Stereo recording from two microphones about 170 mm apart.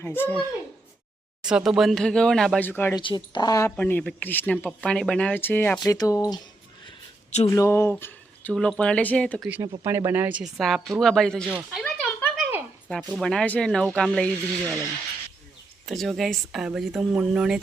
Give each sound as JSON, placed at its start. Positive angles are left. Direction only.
{"t": 0.0, "sound": "speech", "side_deg": 10}
{"t": 1.4, "sound": "speech", "side_deg": -5}
{"t": 2.9, "sound": "speech", "side_deg": 30}
{"t": 3.8, "sound": "speech", "side_deg": 10}
{"t": 7.3, "sound": "speech", "side_deg": 40}
{"t": 7.5, "sound": "speech", "side_deg": 15}
{"t": 9.8, "sound": "speech", "side_deg": -15}
{"t": 10.6, "sound": "speech", "side_deg": 0}
{"t": 12.4, "sound": "a sound", "side_deg": -10}
{"t": 12.9, "sound": "speech", "side_deg": -5}
{"t": 15.9, "sound": "speech", "side_deg": 0}